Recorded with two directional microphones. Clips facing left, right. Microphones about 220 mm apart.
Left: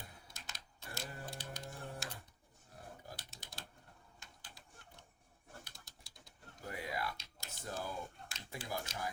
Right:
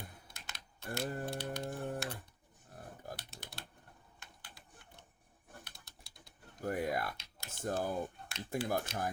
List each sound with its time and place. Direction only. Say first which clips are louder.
0.3 s typing: right 1 dB; 60° right (ahead or behind)
3.2 s typing: right 3 dB; 60° right (ahead or behind)
5.6 s typewriter: right 2 dB; 60° right (ahead or behind)
6.7 s computer keyboard: right 7 dB; 50° right (ahead or behind)